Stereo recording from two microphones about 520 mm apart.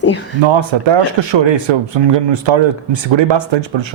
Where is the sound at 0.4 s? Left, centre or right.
Right.